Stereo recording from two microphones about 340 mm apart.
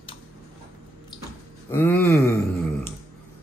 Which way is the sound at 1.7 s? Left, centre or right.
Centre.